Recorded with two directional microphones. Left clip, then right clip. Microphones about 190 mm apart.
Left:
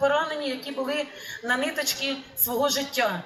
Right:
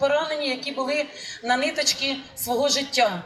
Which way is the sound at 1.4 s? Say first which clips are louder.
Right 4 dB; 10° right (ahead or behind).